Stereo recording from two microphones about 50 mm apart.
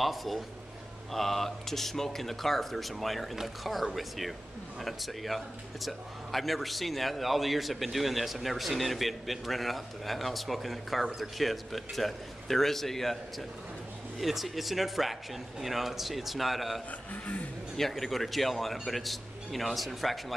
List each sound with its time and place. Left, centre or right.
0.0 s speech: centre
17.1 s music: left
17.7 s speech: centre